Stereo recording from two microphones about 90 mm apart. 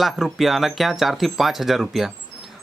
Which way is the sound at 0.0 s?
Centre (ahead or behind).